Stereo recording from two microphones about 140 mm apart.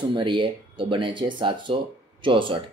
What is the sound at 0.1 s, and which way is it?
Speech, 35° right (ahead or behind).